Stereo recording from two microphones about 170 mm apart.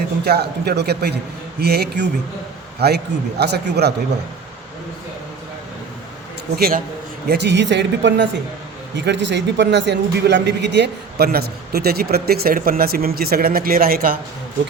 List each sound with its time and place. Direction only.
0.3 s a man's voice: 70° right (ahead or behind)
6.6 s speech: 60° right (ahead or behind)
7.3 s speech: 90° right; by 14.2 s 60° right (ahead or behind)